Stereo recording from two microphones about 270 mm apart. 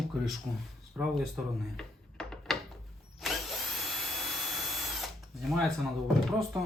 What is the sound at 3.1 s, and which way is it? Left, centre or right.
Drill, centre.